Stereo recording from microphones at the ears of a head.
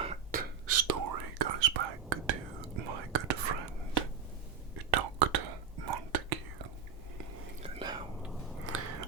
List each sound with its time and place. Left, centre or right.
0.1 s whispering: right
8.2 s chewing: centre
8.7 s biting: right